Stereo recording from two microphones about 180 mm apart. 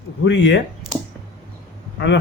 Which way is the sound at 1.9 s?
80° left.